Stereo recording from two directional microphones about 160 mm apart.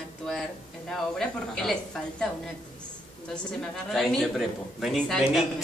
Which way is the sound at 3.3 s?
5° left (ahead or behind).